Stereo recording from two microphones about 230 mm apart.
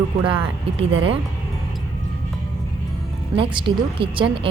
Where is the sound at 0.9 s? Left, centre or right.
Right.